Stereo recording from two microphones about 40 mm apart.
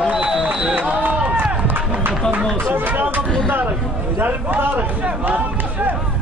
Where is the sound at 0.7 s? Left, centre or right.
Right.